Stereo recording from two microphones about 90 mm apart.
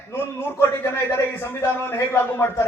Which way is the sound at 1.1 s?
25° left (ahead or behind).